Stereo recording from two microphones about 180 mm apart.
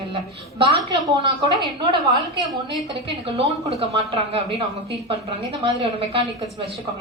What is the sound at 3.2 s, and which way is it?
Speech, 35° right (ahead or behind).